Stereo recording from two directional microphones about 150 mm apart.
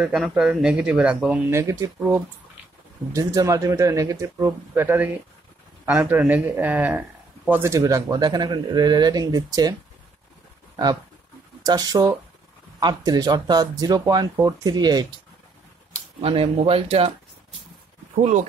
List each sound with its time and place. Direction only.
0.0 s speech: 5° right (ahead or behind); by 9.8 s 25° right (ahead or behind)
11.6 s speech: 25° right (ahead or behind)
16.2 s speech: 40° right (ahead or behind)
18.2 s speech: 55° right (ahead or behind)